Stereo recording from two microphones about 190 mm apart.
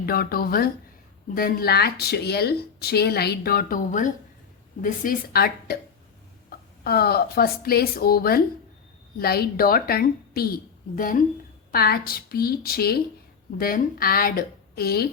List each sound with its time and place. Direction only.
0.0 s a woman's voice: 50° left (ahead or behind)